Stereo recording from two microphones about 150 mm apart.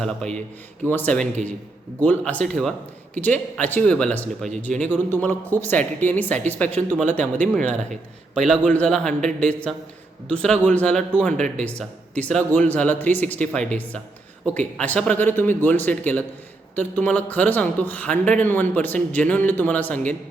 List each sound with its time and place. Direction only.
0.0 s a man's voice: 5° left (ahead or behind)